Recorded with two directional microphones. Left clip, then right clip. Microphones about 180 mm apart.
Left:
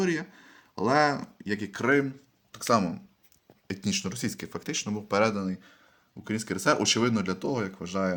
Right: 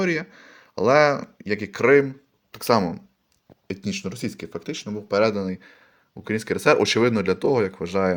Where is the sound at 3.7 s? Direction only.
Centre (ahead or behind).